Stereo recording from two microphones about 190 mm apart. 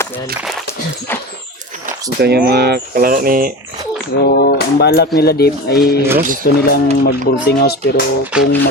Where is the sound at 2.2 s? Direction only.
55° right (ahead or behind).